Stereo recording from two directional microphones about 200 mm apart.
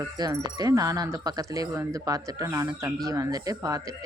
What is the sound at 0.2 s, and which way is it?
Speech, 20° right (ahead or behind).